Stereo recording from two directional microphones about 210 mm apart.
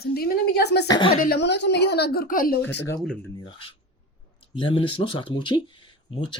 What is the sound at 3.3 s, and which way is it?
Speech, 25° left (ahead or behind).